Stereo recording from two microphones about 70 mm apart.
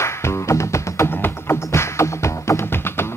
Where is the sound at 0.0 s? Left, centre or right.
Left.